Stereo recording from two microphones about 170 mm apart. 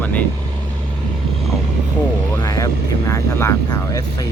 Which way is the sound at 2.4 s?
20° left (ahead or behind).